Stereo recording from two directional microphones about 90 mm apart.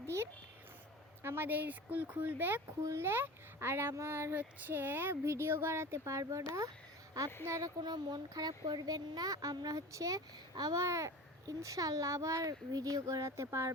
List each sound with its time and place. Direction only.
0.0 s a sound: 30° right (ahead or behind)
1.2 s speech: 25° right (ahead or behind)
7.8 s speech: 50° right (ahead or behind); by 13.7 s 35° right (ahead or behind)